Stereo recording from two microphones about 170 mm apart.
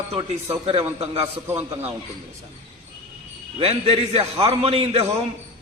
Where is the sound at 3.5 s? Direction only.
35° right (ahead or behind).